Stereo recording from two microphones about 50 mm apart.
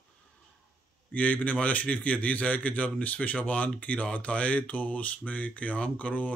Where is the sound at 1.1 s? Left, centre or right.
Left.